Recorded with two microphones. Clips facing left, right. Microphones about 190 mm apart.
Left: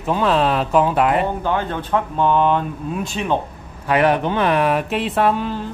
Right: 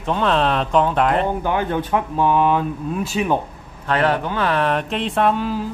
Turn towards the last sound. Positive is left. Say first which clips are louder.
# even
turn(degrees=0)  # may be behind; listen again after turning